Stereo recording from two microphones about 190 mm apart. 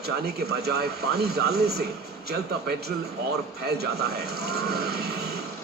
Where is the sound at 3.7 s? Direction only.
60° right (ahead or behind).